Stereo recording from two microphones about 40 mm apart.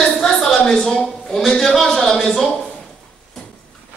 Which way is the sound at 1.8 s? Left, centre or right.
Centre.